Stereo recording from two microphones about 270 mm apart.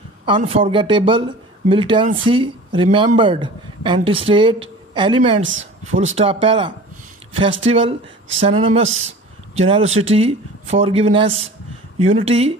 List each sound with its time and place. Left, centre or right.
0.2 s speech: right
5.4 s speech: right
5.9 s speech: right